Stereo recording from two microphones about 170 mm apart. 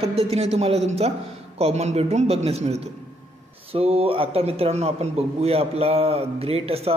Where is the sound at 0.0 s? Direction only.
35° right (ahead or behind).